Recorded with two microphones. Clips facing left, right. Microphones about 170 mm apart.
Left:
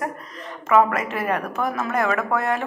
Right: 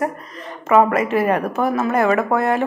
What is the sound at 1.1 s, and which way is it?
A woman's voice, 30° right (ahead or behind).